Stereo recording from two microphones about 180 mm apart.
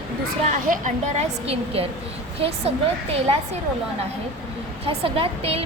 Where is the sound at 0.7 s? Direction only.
45° right (ahead or behind).